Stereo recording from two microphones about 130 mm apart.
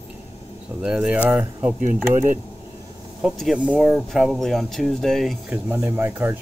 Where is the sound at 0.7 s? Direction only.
10° right (ahead or behind).